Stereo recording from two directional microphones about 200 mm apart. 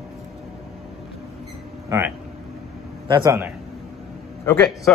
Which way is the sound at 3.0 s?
20° right (ahead or behind).